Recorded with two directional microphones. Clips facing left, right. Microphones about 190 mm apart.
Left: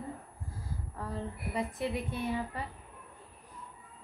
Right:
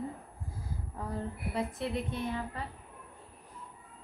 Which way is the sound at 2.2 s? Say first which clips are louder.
Left 2 dB; 15° left (ahead or behind).